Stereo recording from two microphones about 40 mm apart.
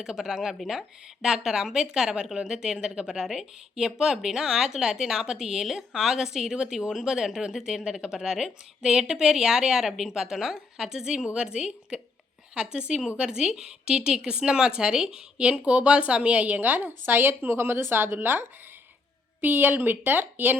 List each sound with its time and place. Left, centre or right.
0.0 s speech: centre
3.2 s speech: centre
13.1 s speech: right
16.6 s a woman's voice: right
19.4 s a woman's voice: right